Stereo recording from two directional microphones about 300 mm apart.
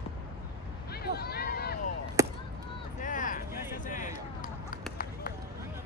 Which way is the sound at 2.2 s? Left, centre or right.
Centre.